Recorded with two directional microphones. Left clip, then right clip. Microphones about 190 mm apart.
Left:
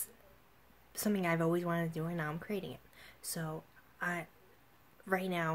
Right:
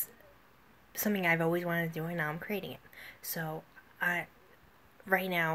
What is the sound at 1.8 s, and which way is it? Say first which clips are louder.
Speech: right 4 dB; centre (ahead or behind).